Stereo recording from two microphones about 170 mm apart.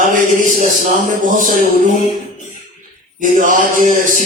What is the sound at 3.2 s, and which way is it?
A man's voice, 50° right (ahead or behind).